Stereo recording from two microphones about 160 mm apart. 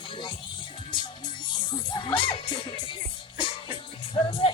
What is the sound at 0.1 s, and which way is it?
Music, 30° left (ahead or behind).